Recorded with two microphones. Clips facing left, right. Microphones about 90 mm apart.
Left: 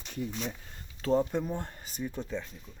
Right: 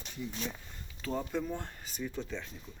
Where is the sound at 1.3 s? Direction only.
15° left (ahead or behind).